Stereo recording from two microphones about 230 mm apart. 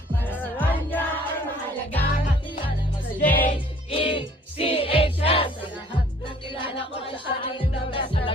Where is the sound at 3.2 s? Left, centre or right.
Left.